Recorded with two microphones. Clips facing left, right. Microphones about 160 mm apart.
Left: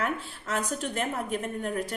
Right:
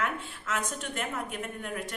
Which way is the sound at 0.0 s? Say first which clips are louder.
Left 2 dB; 35° left (ahead or behind).